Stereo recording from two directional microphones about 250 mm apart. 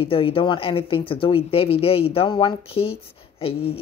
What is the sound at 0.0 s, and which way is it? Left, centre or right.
Speech, left.